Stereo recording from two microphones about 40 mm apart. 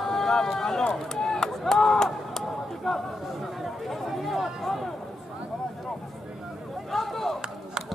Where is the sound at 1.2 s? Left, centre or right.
Centre.